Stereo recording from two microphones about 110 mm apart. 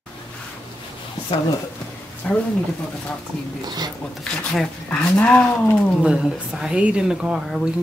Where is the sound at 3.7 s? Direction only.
40° right (ahead or behind).